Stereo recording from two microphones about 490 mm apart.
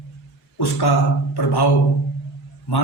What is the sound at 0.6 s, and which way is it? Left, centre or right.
A man's voice, left.